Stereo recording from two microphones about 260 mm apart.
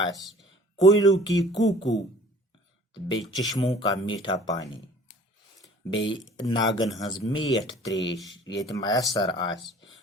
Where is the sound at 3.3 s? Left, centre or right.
Centre.